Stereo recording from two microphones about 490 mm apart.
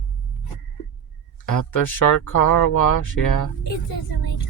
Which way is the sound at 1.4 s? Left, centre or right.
Left.